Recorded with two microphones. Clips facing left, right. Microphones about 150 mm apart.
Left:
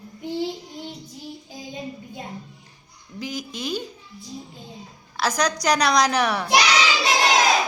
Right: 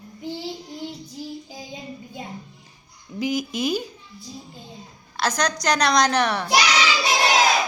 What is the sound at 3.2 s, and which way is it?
Speech, 10° right (ahead or behind).